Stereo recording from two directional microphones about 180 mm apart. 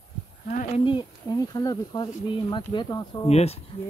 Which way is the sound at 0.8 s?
25° left (ahead or behind).